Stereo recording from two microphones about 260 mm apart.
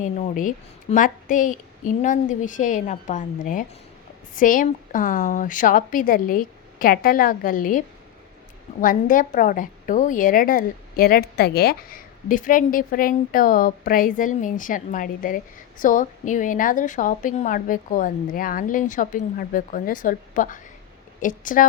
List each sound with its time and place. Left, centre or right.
0.0 s a woman's voice: left